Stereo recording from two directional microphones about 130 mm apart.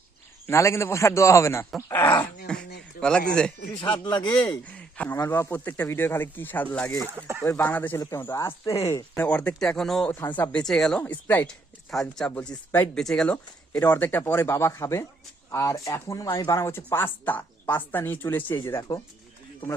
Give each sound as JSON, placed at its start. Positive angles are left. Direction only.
{"t": 0.4, "sound": "speech", "side_deg": 20}
{"t": 7.1, "sound": "speech", "side_deg": -15}
{"t": 7.4, "sound": "speech", "side_deg": 20}
{"t": 10.1, "sound": "speech", "side_deg": 15}
{"t": 11.9, "sound": "speech", "side_deg": 5}